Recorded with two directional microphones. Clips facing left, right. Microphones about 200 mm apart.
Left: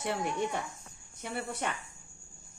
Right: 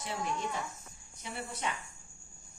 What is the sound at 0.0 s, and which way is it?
A woman's voice, 60° left (ahead or behind).